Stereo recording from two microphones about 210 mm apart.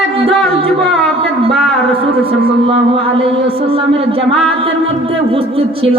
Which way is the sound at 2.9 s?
25° right (ahead or behind).